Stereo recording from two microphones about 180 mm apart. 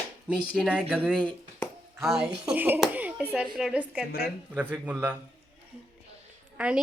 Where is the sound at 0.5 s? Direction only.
5° right (ahead or behind).